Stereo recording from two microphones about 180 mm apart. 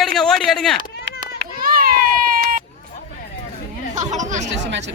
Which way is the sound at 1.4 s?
55° right (ahead or behind).